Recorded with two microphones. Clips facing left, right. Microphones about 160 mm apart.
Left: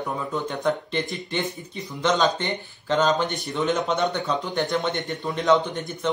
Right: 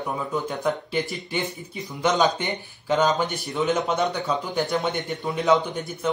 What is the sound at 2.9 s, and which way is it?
A man's voice, centre (ahead or behind).